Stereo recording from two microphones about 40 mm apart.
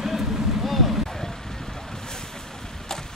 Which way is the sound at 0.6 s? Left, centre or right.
Centre.